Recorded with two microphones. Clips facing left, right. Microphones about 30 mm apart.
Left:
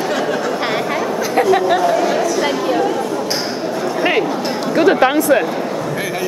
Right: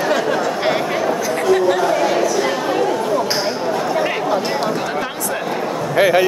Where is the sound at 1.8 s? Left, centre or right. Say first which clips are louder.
Left 1 dB; centre.